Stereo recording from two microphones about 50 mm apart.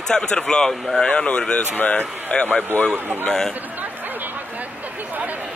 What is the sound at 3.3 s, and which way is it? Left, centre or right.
Speech, centre.